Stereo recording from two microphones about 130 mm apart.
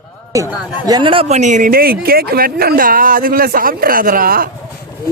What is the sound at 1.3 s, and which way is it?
Speech, 65° right (ahead or behind).